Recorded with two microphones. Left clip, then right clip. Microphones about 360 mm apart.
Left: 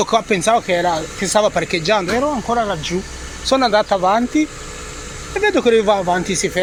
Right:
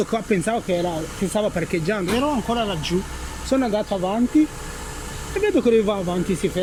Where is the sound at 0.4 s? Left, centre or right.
Left.